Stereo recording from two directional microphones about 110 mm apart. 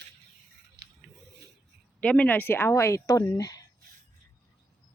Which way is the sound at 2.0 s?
10° left (ahead or behind).